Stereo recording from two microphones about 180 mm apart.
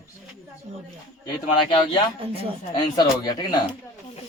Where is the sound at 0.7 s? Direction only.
45° right (ahead or behind).